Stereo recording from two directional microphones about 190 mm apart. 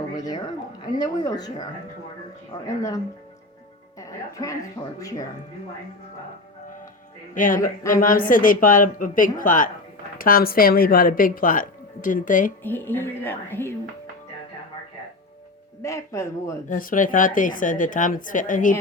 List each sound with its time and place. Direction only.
0.2 s a woman's voice: 20° left (ahead or behind)
7.3 s a woman's voice: 45° left (ahead or behind)
12.6 s speech: 10° left (ahead or behind)
15.8 s speech: 15° left (ahead or behind)
16.6 s a woman's voice: 45° left (ahead or behind)